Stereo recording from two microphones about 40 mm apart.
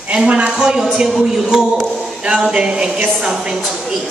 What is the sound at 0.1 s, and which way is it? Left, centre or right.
Speech, right.